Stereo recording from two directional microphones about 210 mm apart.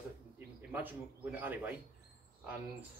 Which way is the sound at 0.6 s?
10° right (ahead or behind).